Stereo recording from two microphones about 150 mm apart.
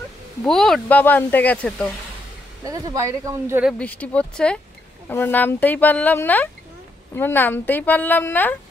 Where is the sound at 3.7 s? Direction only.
10° left (ahead or behind).